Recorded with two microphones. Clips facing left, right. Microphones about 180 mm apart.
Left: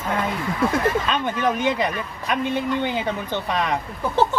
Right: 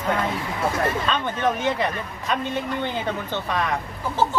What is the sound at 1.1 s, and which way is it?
Speech, 15° left (ahead or behind).